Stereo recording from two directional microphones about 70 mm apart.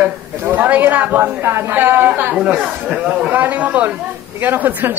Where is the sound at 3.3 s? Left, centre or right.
Right.